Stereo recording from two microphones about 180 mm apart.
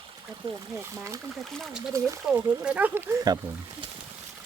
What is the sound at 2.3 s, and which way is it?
Speech, 5° right (ahead or behind).